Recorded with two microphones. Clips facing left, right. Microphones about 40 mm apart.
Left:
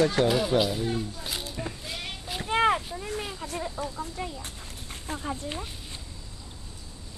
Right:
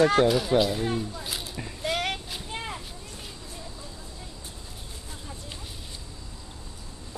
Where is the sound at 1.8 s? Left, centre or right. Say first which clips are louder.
Right 9 dB; right.